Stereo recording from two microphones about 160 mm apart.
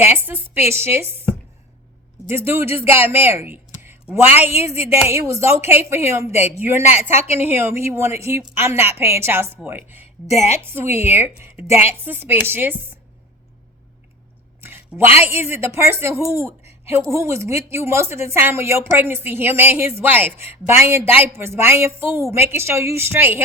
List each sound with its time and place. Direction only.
0.0 s speech: 15° right (ahead or behind)
2.2 s speech: 15° right (ahead or behind)
10.2 s a woman's voice: 40° left (ahead or behind)
10.8 s speech: 15° right (ahead or behind)
14.6 s a sound: 15° right (ahead or behind)
15.2 s speech: 15° right (ahead or behind)